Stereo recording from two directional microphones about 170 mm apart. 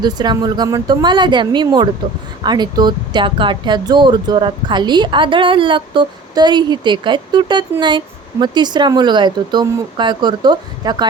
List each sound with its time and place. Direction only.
0.0 s speech: 25° right (ahead or behind)